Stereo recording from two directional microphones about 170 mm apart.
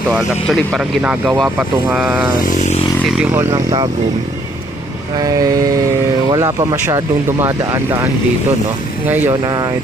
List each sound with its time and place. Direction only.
0.1 s speech: 5° left (ahead or behind)
2.4 s a sound: 45° left (ahead or behind)
3.1 s speech: 10° right (ahead or behind)
5.2 s vehicle: 20° right (ahead or behind)
6.3 s speech: 20° right (ahead or behind)
9.3 s vehicle: 25° right (ahead or behind)